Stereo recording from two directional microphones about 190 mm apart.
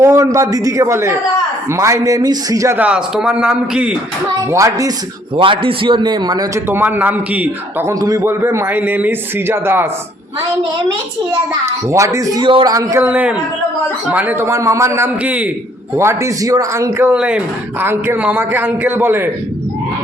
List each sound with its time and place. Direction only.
0.0 s a man's voice: 15° right (ahead or behind)
4.5 s a man's voice: 15° right (ahead or behind)
5.4 s a man's voice: 25° right (ahead or behind); by 9.8 s 10° right (ahead or behind)
11.6 s a man's voice: 15° right (ahead or behind)